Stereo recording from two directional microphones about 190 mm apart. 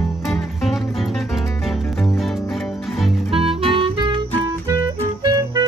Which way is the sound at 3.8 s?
25° right (ahead or behind).